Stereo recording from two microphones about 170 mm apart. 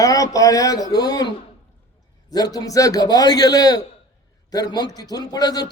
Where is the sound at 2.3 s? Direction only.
25° left (ahead or behind).